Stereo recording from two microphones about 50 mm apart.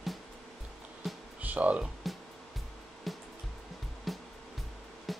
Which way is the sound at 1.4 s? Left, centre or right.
Right.